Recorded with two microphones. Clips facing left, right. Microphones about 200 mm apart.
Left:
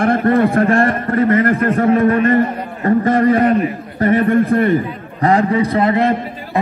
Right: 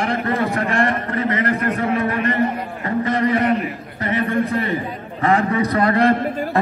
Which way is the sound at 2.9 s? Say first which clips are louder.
Left 7 dB; 50° left (ahead or behind).